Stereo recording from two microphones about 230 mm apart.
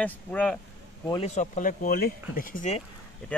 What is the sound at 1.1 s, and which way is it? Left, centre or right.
Speech, left.